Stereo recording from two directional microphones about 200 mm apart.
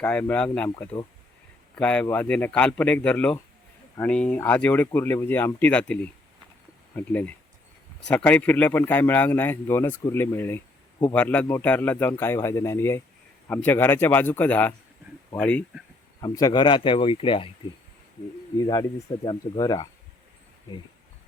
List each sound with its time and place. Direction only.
0.0 s speech: 5° left (ahead or behind)
16.2 s speech: 20° left (ahead or behind)
18.6 s speech: 20° left (ahead or behind)